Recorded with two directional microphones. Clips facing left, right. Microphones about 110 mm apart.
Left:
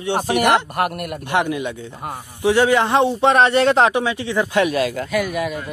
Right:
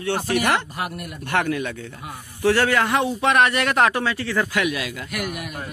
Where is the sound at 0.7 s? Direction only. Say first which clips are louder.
Left 8 dB; 60° left (ahead or behind).